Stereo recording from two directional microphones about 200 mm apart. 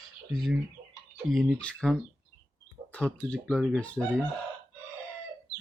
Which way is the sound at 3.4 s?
Centre (ahead or behind).